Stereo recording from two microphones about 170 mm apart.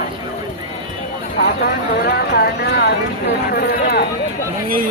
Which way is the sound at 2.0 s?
65° left (ahead or behind).